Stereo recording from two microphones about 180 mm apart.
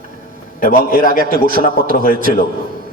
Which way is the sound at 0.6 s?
50° left (ahead or behind).